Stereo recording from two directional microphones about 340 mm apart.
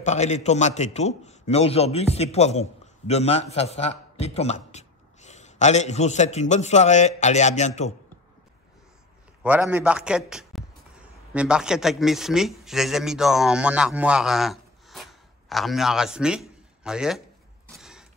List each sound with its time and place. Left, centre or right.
0.0 s a man's voice: centre
9.4 s a man's voice: centre
17.7 s mechanisms: centre